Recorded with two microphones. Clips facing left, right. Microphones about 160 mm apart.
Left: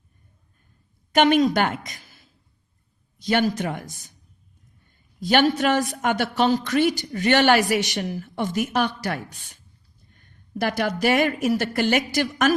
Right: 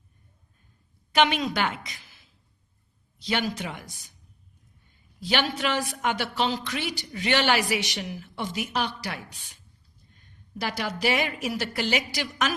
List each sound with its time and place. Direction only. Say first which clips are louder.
1.1 s a woman's voice: left 6 dB; 50° left (ahead or behind)
5.2 s a man's voice: left 8 dB; 45° left (ahead or behind)